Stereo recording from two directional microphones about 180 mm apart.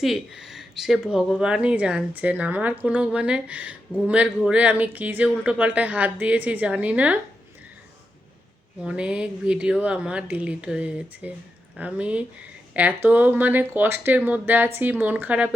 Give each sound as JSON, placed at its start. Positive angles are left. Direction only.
{"t": 0.0, "sound": "speech", "side_deg": 0}
{"t": 8.8, "sound": "speech", "side_deg": -5}